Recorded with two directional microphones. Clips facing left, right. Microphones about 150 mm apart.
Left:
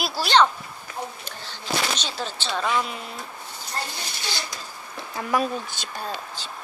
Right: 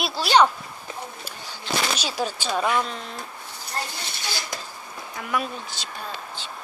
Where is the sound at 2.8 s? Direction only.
5° left (ahead or behind).